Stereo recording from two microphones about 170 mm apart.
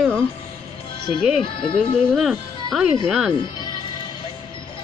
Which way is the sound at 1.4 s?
30° left (ahead or behind).